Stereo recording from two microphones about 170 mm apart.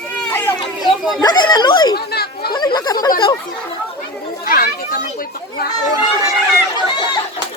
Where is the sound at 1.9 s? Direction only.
70° left (ahead or behind).